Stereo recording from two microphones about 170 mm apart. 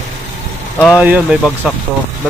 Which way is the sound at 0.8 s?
5° right (ahead or behind).